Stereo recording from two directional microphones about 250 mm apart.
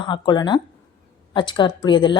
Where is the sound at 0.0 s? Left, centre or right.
Centre.